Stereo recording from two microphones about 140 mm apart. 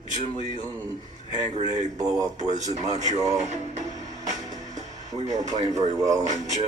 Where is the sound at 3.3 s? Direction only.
55° right (ahead or behind).